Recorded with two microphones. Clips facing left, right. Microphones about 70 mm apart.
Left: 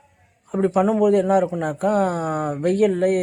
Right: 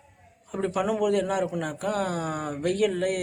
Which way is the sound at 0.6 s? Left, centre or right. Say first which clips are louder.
Left 8 dB; left.